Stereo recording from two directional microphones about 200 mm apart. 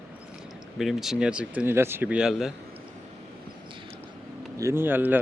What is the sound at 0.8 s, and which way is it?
Speech, centre (ahead or behind).